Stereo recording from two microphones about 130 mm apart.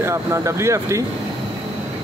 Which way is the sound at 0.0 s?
20° right (ahead or behind).